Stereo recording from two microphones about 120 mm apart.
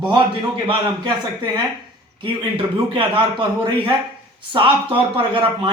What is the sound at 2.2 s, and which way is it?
A man's voice, 45° right (ahead or behind).